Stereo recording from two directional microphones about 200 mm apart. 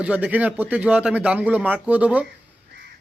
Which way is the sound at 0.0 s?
5° right (ahead or behind).